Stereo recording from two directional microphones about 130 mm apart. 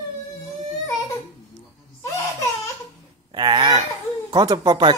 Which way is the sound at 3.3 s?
35° right (ahead or behind).